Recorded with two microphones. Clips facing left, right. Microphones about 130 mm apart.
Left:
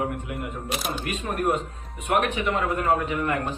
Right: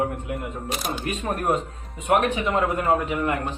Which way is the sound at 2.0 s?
25° right (ahead or behind).